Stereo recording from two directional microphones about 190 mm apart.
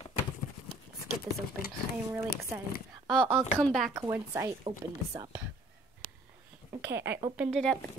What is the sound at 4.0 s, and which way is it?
Speech, 15° right (ahead or behind).